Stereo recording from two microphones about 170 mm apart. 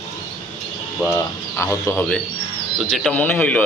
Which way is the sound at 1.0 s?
15° left (ahead or behind).